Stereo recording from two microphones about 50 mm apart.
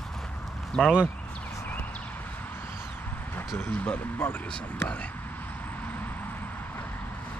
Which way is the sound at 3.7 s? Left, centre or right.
Left.